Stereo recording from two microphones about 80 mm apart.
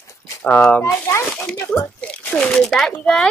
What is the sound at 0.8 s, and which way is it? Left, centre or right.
Speech, left.